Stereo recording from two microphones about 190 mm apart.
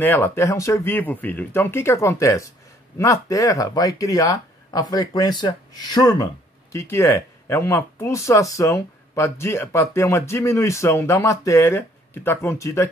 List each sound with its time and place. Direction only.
0.0 s speech: 10° left (ahead or behind)